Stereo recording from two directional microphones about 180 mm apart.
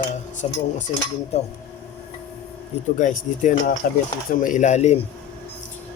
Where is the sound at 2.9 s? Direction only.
45° left (ahead or behind).